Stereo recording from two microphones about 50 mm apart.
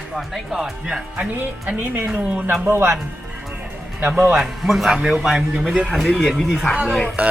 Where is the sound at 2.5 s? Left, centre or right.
Right.